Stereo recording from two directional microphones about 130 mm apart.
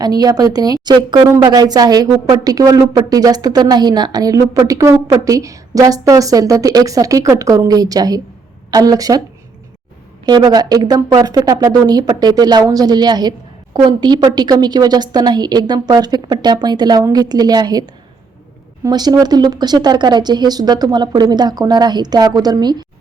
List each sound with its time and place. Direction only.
0.0 s speech: 30° right (ahead or behind)
10.2 s speech: 30° right (ahead or behind)